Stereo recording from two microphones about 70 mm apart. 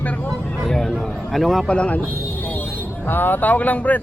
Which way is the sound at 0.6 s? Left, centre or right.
Centre.